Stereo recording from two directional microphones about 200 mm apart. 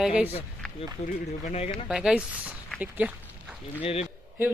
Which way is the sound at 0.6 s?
5° left (ahead or behind).